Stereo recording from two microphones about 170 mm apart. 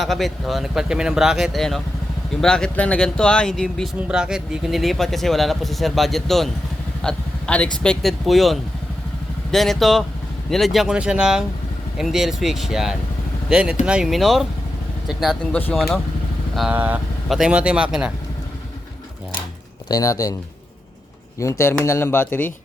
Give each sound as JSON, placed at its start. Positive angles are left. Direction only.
{"t": 0.0, "sound": "speech", "side_deg": 0}
{"t": 19.9, "sound": "speech", "side_deg": 20}
{"t": 21.6, "sound": "speech", "side_deg": 15}